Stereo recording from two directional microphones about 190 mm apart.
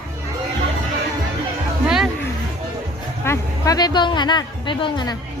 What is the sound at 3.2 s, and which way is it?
Speech, 15° left (ahead or behind).